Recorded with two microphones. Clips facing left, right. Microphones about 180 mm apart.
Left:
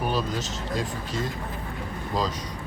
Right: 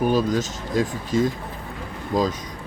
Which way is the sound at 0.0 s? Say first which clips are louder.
Right 7 dB; 45° right (ahead or behind).